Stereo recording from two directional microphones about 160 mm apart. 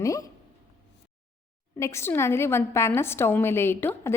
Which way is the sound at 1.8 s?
15° left (ahead or behind).